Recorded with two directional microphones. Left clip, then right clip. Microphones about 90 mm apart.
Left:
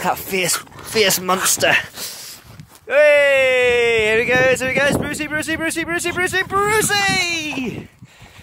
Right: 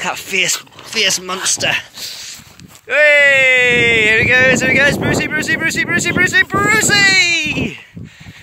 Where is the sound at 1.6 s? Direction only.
90° left.